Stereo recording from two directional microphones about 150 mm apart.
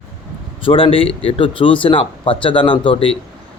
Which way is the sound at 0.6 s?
35° left (ahead or behind).